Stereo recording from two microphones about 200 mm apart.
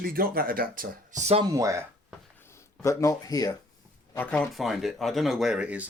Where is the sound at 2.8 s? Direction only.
15° left (ahead or behind).